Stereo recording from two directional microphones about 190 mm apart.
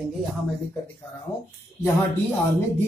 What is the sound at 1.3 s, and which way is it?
Speech, 15° left (ahead or behind).